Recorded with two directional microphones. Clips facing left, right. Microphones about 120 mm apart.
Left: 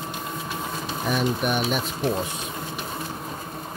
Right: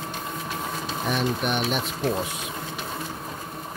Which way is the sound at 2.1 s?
5° right (ahead or behind).